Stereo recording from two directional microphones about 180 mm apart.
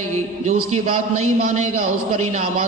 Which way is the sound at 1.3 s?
45° right (ahead or behind).